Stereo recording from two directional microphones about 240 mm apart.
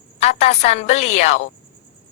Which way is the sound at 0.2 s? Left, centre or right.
Left.